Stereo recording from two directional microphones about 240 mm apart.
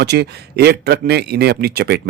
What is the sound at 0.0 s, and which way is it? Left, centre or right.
A man's voice, right.